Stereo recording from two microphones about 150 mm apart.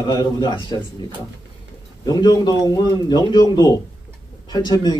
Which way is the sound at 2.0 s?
25° left (ahead or behind).